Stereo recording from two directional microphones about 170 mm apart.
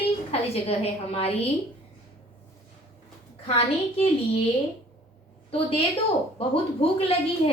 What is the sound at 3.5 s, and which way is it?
Speech, 35° left (ahead or behind).